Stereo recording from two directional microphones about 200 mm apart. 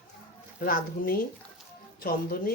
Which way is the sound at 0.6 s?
45° left (ahead or behind).